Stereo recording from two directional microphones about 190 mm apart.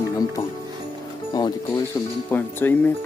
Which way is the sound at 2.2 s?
10° left (ahead or behind).